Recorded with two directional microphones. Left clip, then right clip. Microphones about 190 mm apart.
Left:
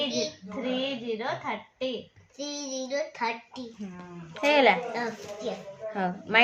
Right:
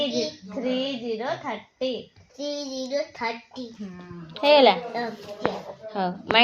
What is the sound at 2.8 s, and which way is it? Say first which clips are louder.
Speech: right 1 dB; 25° left (ahead or behind).